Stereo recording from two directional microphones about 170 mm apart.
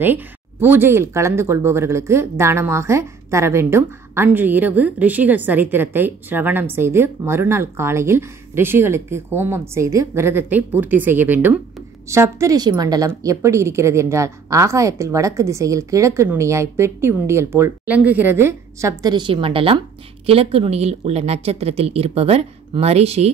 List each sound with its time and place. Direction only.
0.0 s speech: 10° right (ahead or behind); by 23.3 s 40° right (ahead or behind)